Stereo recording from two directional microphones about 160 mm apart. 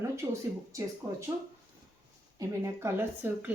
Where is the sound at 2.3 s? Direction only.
20° right (ahead or behind).